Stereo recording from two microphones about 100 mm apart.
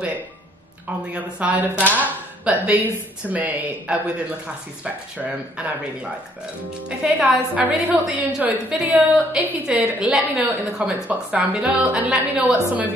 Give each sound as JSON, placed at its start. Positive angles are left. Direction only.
{"t": 1.1, "sound": "a woman's voice", "side_deg": -15}